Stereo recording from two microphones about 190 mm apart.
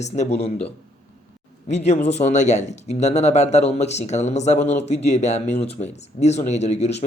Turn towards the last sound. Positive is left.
turn(degrees=35)  # may be behind; listen again after turning